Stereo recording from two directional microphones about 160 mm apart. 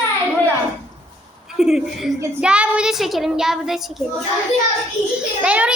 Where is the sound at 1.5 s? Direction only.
5° right (ahead or behind).